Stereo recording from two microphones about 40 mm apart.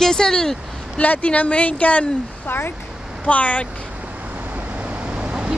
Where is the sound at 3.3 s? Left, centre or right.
Left.